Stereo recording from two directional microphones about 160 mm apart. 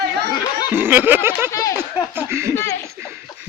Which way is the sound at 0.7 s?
10° right (ahead or behind).